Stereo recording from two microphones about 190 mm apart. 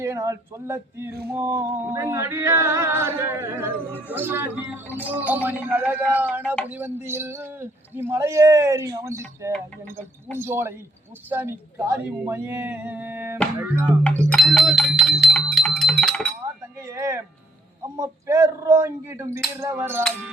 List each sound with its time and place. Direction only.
0.0 s speech: 15° right (ahead or behind)
14.2 s bell: 5° left (ahead or behind)
16.8 s a sound: 15° right (ahead or behind)
17.9 s speech: 15° right (ahead or behind)